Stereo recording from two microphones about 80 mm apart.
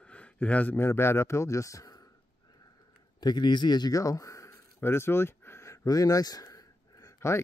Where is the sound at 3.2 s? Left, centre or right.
Left.